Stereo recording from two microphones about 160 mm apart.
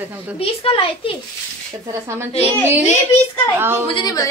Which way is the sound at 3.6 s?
15° right (ahead or behind).